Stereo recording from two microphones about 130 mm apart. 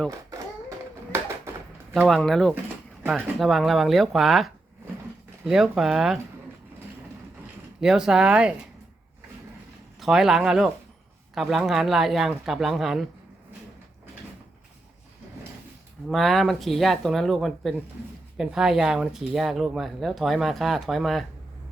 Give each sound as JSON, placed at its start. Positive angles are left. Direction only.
{"t": 0.1, "sound": "a child's voice", "side_deg": -25}
{"t": 1.5, "sound": "a sound", "side_deg": -20}
{"t": 2.0, "sound": "speech", "side_deg": 0}
{"t": 7.8, "sound": "speech", "side_deg": -5}
{"t": 10.0, "sound": "speech", "side_deg": -5}
{"t": 16.0, "sound": "speech", "side_deg": 0}